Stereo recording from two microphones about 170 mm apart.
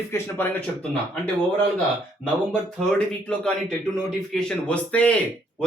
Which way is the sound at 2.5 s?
5° left (ahead or behind).